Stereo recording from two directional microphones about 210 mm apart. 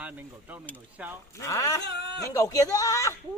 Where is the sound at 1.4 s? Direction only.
15° left (ahead or behind).